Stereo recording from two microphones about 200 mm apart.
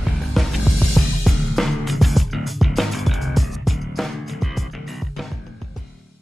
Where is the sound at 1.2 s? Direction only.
Centre (ahead or behind).